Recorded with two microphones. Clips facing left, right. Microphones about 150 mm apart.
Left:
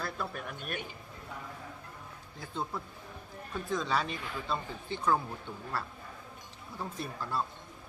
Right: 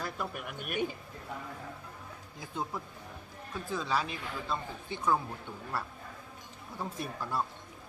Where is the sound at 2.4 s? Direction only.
15° right (ahead or behind).